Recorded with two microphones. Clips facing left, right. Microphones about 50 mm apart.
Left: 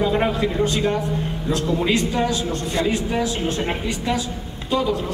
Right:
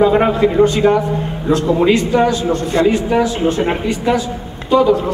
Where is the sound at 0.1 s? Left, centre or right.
Right.